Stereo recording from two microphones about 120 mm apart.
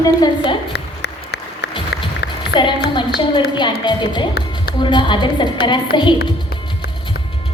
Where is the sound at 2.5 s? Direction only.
40° left (ahead or behind).